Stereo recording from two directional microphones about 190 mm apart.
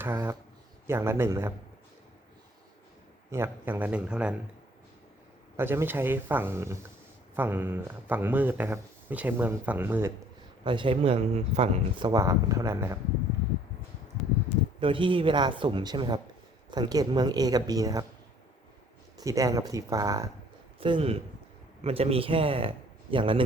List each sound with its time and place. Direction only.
0.0 s speech: 15° right (ahead or behind)
3.3 s speech: 10° right (ahead or behind)
5.5 s speech: 10° right (ahead or behind)
10.6 s speech: 25° right (ahead or behind)
14.8 s speech: 25° right (ahead or behind)
19.1 s speech: 15° right (ahead or behind)
20.7 s speech: 25° right (ahead or behind)